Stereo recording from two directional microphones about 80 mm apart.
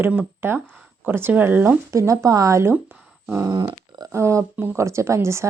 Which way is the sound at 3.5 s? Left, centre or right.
Right.